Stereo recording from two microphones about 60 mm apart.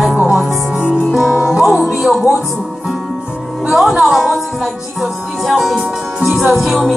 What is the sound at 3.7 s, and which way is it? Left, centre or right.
Speech, centre.